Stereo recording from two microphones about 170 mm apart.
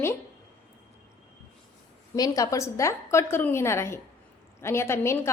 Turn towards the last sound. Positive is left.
turn(degrees=15)  # may be behind; listen again after turning